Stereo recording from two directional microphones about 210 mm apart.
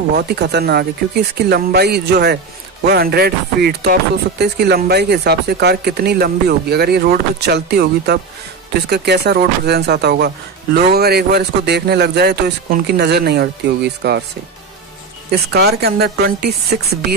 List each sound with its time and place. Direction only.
0.1 s speech: 50° right (ahead or behind)
15.3 s speech: 50° right (ahead or behind)